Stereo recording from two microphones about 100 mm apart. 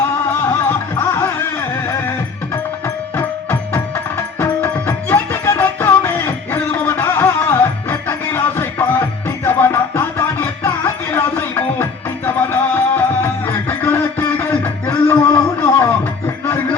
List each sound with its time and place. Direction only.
0.0 s music: 20° left (ahead or behind)
2.8 s music: 20° left (ahead or behind)